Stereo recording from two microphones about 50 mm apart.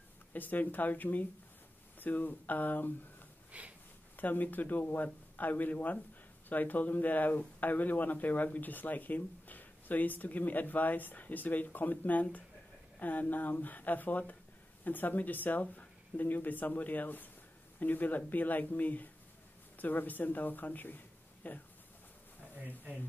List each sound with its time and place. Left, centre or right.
0.3 s speech: left
3.5 s sniff: right
4.2 s speech: left